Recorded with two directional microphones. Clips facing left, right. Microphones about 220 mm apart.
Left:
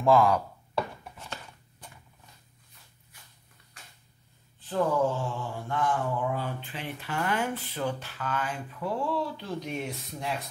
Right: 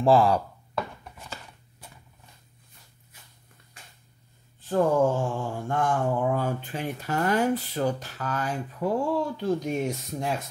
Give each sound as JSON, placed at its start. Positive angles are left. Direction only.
{"t": 0.0, "sound": "speech", "side_deg": -30}
{"t": 1.1, "sound": "chopping", "side_deg": -10}
{"t": 4.6, "sound": "a sound", "side_deg": -45}